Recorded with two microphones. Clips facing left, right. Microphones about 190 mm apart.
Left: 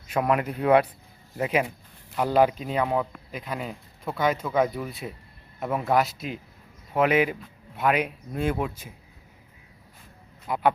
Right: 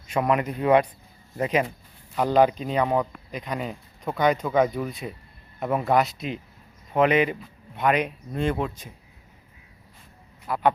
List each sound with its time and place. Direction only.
0.1 s a man's voice: 5° left (ahead or behind)
10.4 s speech: 20° left (ahead or behind)